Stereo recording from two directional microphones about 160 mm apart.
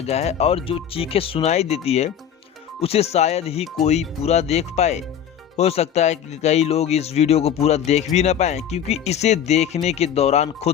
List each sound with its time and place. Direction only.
0.0 s speech: 40° left (ahead or behind)